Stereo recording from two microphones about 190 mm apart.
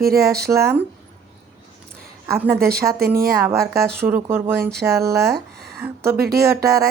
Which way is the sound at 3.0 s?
55° right (ahead or behind).